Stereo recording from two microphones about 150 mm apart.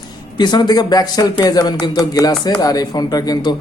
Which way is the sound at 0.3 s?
30° left (ahead or behind).